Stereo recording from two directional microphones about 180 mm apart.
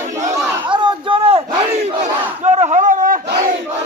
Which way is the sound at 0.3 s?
25° right (ahead or behind).